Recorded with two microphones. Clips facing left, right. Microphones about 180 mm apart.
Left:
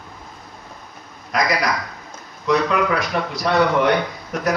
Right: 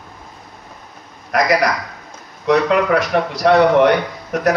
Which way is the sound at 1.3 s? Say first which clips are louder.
Right 5 dB; 70° right (ahead or behind).